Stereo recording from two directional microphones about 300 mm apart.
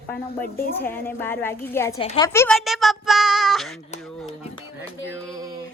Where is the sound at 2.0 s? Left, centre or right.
Centre.